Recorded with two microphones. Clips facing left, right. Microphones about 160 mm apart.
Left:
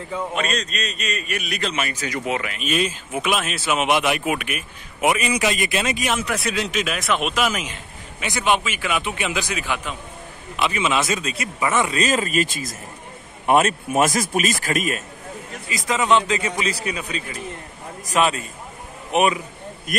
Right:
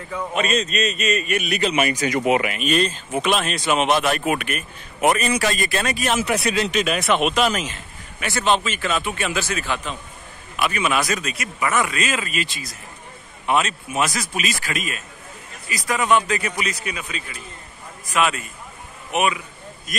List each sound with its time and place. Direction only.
0.3 s a man's voice: 5° right (ahead or behind)
2.5 s speech: 5° left (ahead or behind)
6.1 s a man's voice: centre (ahead or behind); by 15.0 s 45° left (ahead or behind)
15.7 s a man's voice: 20° left (ahead or behind)
19.9 s speech: 60° left (ahead or behind)